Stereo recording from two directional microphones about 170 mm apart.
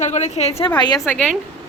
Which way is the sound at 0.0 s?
40° left (ahead or behind).